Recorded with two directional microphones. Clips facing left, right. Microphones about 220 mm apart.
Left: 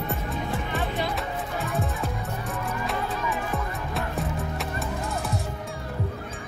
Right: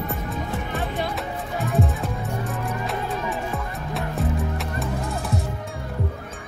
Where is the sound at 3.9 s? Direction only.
Centre (ahead or behind).